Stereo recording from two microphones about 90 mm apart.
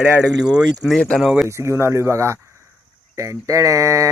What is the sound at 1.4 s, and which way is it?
Speech, 30° right (ahead or behind).